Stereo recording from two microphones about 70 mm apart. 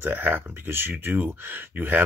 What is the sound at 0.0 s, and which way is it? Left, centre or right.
Speech, right.